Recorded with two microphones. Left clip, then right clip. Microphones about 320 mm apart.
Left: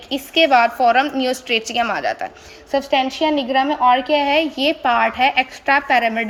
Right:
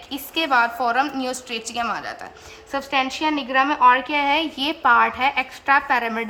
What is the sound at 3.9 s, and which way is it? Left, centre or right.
A woman's voice, centre.